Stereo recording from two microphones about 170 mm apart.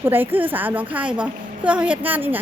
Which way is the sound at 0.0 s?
10° right (ahead or behind).